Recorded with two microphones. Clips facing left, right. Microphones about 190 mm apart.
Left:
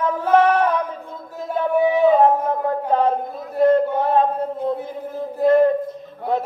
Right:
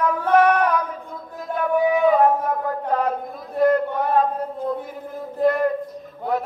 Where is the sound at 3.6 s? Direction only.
25° left (ahead or behind).